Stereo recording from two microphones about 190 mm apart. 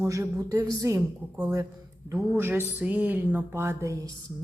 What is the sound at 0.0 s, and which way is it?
A woman's voice, 15° right (ahead or behind).